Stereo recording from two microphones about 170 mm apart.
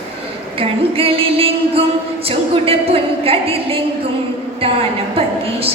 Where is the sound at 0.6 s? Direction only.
35° right (ahead or behind).